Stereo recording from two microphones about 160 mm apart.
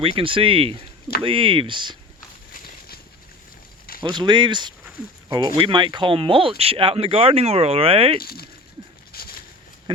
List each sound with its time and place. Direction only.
0.0 s speech: 35° right (ahead or behind)
4.0 s speech: 25° right (ahead or behind)
8.2 s speech: 70° left (ahead or behind)
9.1 s a sound: 70° left (ahead or behind)